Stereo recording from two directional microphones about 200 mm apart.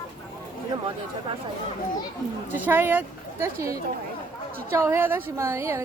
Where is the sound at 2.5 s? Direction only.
10° right (ahead or behind).